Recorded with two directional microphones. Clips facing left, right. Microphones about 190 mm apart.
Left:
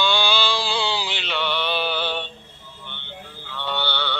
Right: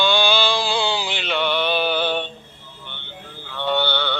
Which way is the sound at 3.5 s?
50° right (ahead or behind).